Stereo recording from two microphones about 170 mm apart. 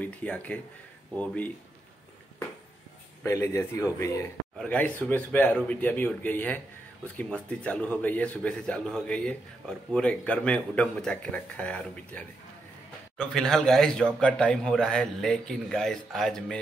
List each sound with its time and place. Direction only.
0.0 s a man's voice: 10° left (ahead or behind)
3.3 s a man's voice: 15° left (ahead or behind)